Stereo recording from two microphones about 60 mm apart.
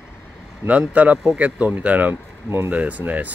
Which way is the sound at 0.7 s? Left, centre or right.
Right.